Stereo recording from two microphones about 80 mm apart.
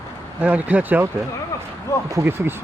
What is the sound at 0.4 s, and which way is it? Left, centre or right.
Speech, centre.